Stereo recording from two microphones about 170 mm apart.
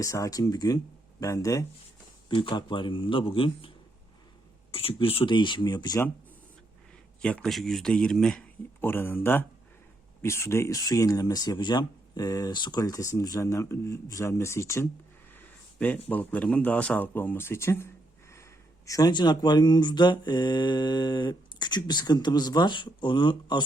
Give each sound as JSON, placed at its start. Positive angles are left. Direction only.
{"t": 0.0, "sound": "speech", "side_deg": 20}
{"t": 2.3, "sound": "speech", "side_deg": 30}
{"t": 4.7, "sound": "speech", "side_deg": 35}
{"t": 7.2, "sound": "speech", "side_deg": 5}
{"t": 15.3, "sound": "a sound", "side_deg": 10}
{"t": 16.0, "sound": "speech", "side_deg": 10}
{"t": 18.9, "sound": "speech", "side_deg": 20}